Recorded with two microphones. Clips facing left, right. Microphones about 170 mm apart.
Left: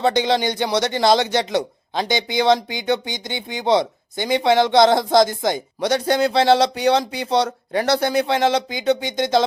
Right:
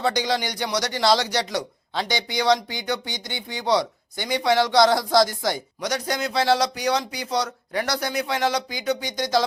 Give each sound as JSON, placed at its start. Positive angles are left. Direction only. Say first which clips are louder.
{"t": 0.0, "sound": "speech", "louder": "left 5 dB", "side_deg": 25}